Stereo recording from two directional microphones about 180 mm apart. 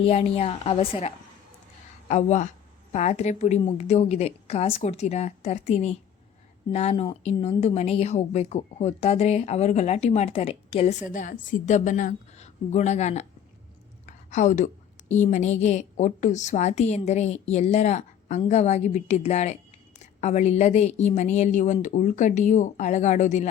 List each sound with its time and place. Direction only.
0.0 s a woman's voice: 35° left (ahead or behind)
7.6 s a woman's voice: 35° left (ahead or behind)
14.1 s a sound: 45° left (ahead or behind)
15.1 s a woman's voice: 40° left (ahead or behind)